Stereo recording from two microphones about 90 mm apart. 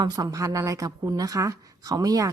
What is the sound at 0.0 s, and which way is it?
A woman's voice, 45° right (ahead or behind).